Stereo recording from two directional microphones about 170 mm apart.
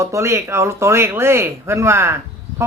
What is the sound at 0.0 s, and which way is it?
A man's voice, 15° right (ahead or behind).